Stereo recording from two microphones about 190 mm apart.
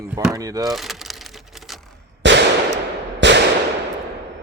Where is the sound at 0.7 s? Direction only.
Centre (ahead or behind).